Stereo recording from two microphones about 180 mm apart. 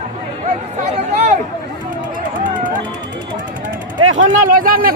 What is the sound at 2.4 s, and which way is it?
Music, 45° right (ahead or behind).